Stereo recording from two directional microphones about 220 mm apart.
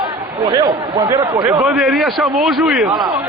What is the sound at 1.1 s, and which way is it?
Speech, 15° right (ahead or behind).